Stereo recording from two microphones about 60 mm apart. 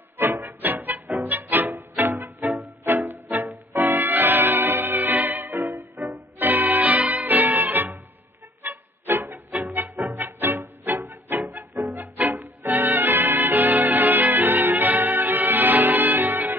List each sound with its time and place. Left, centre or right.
0.2 s music: right